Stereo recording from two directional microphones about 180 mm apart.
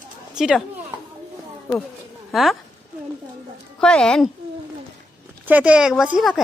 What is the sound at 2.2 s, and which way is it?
Speech, centre (ahead or behind).